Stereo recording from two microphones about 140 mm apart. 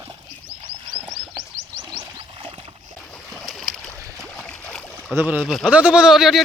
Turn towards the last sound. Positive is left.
turn(degrees=0)  # may be behind; listen again after turning